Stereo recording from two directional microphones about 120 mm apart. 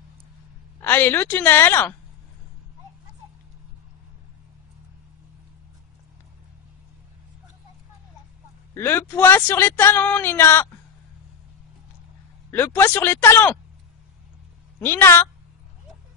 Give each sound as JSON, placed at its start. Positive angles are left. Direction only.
{"t": 0.7, "sound": "a woman's voice", "side_deg": 20}
{"t": 8.7, "sound": "speech", "side_deg": 20}
{"t": 12.4, "sound": "a woman's voice", "side_deg": 15}
{"t": 14.8, "sound": "speech", "side_deg": 20}